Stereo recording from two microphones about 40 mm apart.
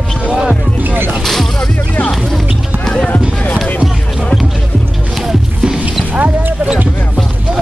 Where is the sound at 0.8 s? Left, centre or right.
Right.